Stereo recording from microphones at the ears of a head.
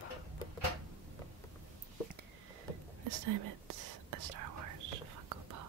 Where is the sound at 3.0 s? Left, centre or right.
Right.